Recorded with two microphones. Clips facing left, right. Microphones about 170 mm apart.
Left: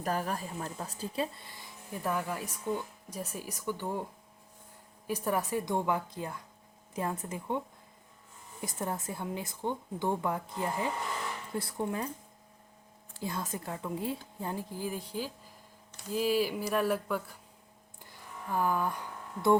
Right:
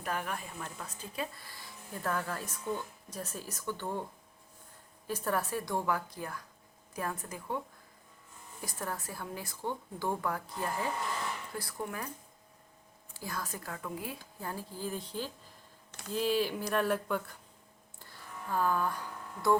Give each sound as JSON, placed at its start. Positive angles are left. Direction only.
{"t": 0.0, "sound": "speech", "side_deg": 35}
{"t": 5.0, "sound": "a woman's voice", "side_deg": 15}
{"t": 8.6, "sound": "a woman's voice", "side_deg": 20}
{"t": 13.2, "sound": "a woman's voice", "side_deg": 25}
{"t": 18.0, "sound": "a sound", "side_deg": 15}